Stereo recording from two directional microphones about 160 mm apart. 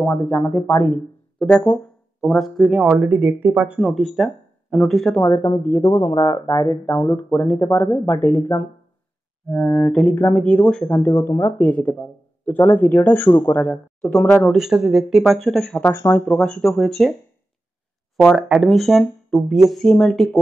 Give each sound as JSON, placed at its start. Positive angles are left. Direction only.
{"t": 0.0, "sound": "speech", "side_deg": 10}
{"t": 11.1, "sound": "speech", "side_deg": 15}
{"t": 18.1, "sound": "speech", "side_deg": 0}